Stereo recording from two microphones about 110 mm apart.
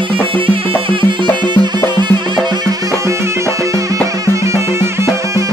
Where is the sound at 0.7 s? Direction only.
50° right (ahead or behind).